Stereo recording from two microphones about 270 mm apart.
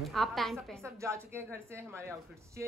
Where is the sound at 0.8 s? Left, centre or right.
Centre.